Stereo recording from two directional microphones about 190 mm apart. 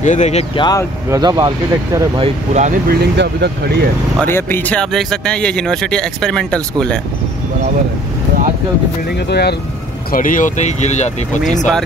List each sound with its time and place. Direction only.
0.0 s speech: 40° left (ahead or behind)
1.1 s speech: 20° right (ahead or behind); by 2.8 s 40° right (ahead or behind)
2.9 s speech: 60° right (ahead or behind)
4.2 s speech: 10° left (ahead or behind)
9.3 s speech: 60° left (ahead or behind)
10.1 s speech: 45° left (ahead or behind)